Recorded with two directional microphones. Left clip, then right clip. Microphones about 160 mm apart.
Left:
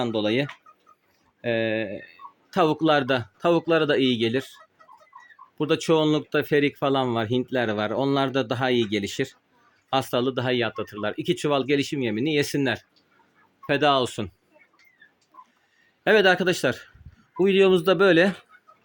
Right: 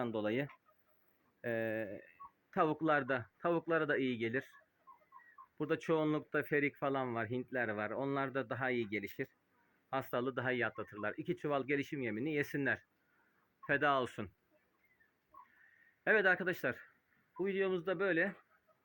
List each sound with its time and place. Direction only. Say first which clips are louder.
0.0 s speech: left 13 dB; 15° left (ahead or behind)
5.5 s speech: left 13 dB; 20° left (ahead or behind)
16.0 s a man's voice: left 13 dB; 30° left (ahead or behind)
17.3 s speech: left 17 dB; 50° left (ahead or behind)